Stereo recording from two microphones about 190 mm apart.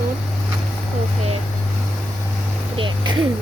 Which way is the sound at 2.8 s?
25° right (ahead or behind).